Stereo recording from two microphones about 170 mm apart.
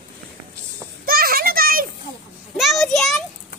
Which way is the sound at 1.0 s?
60° right (ahead or behind).